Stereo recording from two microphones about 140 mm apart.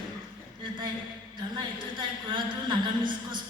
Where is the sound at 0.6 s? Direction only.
35° right (ahead or behind).